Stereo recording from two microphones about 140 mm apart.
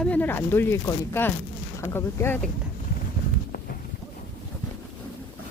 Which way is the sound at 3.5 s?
90° left.